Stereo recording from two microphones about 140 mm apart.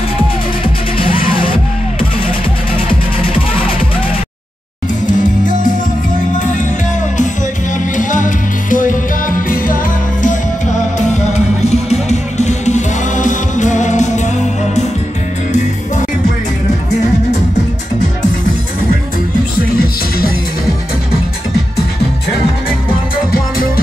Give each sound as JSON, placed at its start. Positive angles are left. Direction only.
{"t": 0.9, "sound": "music", "side_deg": 40}
{"t": 5.0, "sound": "music", "side_deg": 65}
{"t": 7.7, "sound": "music", "side_deg": 65}
{"t": 11.3, "sound": "music", "side_deg": 50}